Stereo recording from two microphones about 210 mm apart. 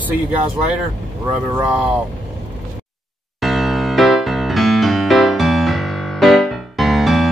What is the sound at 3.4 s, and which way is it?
Music, centre (ahead or behind).